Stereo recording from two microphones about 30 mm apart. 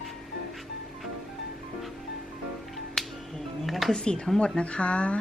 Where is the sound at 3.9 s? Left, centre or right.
Left.